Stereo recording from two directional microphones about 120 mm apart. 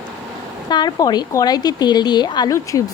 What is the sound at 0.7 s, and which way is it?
A woman's voice, 35° left (ahead or behind).